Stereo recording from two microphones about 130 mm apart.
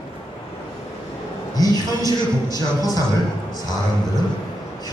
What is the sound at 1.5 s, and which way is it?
A man's voice, 30° left (ahead or behind).